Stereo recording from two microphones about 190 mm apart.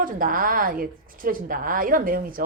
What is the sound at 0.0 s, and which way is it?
A woman's voice, 45° right (ahead or behind).